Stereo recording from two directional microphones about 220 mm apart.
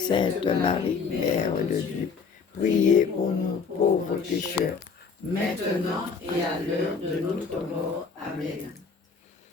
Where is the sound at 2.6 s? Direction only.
35° left (ahead or behind).